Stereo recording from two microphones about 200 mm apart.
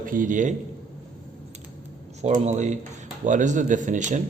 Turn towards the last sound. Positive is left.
turn(degrees=-40)  # may be behind; listen again after turning